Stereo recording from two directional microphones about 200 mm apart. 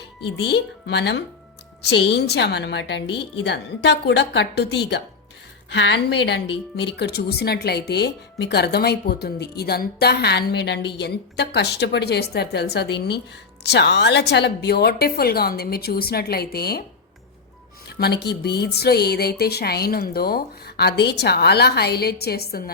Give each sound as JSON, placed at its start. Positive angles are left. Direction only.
{"t": 0.3, "sound": "speech", "side_deg": 60}
{"t": 17.8, "sound": "speech", "side_deg": 55}